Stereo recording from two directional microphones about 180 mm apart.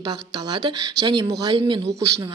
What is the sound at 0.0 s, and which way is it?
A woman's voice, 25° right (ahead or behind).